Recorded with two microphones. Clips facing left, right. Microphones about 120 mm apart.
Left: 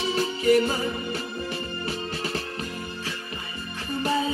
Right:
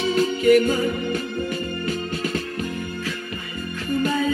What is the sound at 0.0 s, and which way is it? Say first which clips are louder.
Music: right 5 dB; 30° left (ahead or behind).